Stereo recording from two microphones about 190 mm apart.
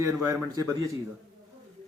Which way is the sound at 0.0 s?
15° right (ahead or behind).